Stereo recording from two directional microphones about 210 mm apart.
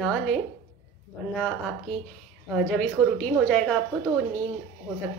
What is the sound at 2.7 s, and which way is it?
A woman's voice, 5° left (ahead or behind).